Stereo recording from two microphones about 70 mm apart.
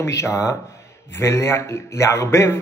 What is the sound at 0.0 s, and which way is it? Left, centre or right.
A man's voice, left.